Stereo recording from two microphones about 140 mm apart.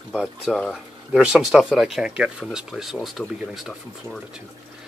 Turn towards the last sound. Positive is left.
turn(degrees=0)  # may be behind; listen again after turning